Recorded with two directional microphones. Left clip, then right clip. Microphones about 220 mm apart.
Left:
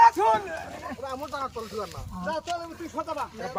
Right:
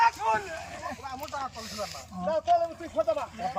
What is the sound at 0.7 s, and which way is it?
Speech, 25° left (ahead or behind).